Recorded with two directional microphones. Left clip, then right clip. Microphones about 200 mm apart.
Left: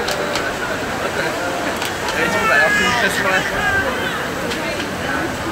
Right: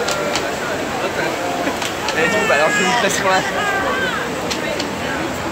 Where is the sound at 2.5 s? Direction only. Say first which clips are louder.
Left 3 dB; 50° right (ahead or behind).